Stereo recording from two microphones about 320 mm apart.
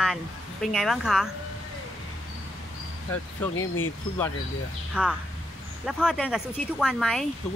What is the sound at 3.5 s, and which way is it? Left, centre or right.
Speech, left.